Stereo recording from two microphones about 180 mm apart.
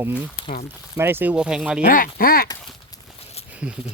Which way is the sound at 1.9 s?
55° left (ahead or behind).